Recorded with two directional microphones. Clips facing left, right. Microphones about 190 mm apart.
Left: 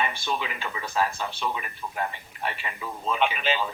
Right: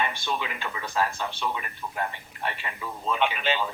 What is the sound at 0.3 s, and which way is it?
Speech, centre (ahead or behind).